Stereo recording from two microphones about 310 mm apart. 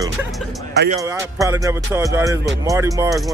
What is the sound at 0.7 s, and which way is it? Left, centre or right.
Speech, right.